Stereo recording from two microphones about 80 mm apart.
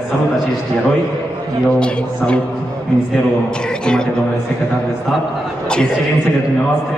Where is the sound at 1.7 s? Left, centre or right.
Centre.